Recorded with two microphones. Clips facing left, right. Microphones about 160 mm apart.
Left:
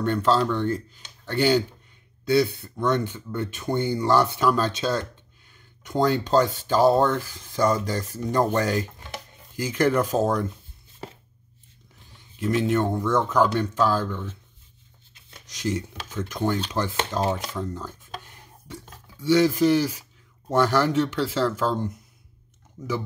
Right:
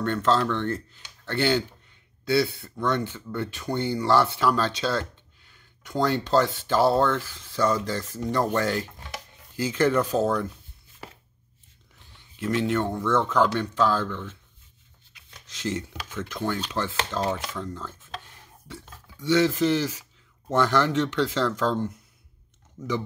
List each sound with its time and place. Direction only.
0.0 s speech: 15° left (ahead or behind)
7.6 s speech: 40° left (ahead or behind)
8.5 s speech: 15° left (ahead or behind)
12.4 s speech: 15° left (ahead or behind)
15.4 s speech: 15° left (ahead or behind)
17.3 s speech: 35° left (ahead or behind)
17.6 s a sound: 15° left (ahead or behind)
19.3 s speech: 15° left (ahead or behind)